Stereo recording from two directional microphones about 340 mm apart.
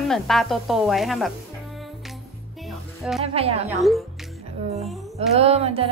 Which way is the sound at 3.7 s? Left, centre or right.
Centre.